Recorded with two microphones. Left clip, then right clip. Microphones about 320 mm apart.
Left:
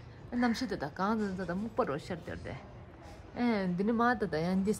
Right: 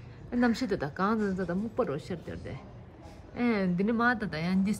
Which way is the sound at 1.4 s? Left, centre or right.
Centre.